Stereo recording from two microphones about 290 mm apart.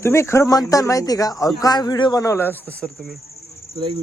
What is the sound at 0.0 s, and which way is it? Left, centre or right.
Speech, centre.